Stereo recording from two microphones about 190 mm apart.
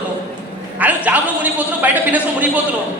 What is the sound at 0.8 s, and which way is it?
A man's voice, 10° right (ahead or behind).